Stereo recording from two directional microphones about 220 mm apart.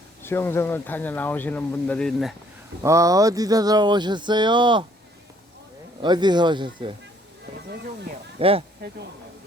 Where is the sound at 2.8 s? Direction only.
15° right (ahead or behind).